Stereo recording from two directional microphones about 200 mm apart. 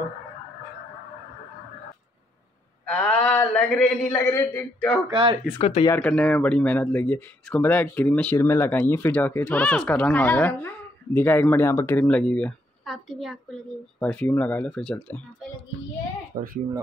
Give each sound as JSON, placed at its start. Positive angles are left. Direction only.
{"t": 2.8, "sound": "speech", "side_deg": 5}
{"t": 5.1, "sound": "speech", "side_deg": -25}
{"t": 5.6, "sound": "speech", "side_deg": 30}
{"t": 5.9, "sound": "speech", "side_deg": 5}
{"t": 16.3, "sound": "speech", "side_deg": -40}